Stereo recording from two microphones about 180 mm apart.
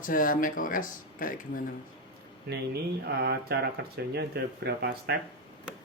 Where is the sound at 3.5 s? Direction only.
60° right (ahead or behind).